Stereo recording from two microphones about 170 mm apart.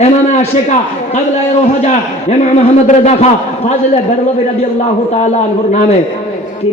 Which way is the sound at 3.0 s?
40° left (ahead or behind).